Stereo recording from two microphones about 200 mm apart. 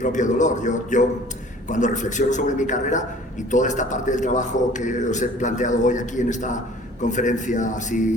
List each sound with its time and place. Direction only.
0.0 s a man's voice: 40° left (ahead or behind)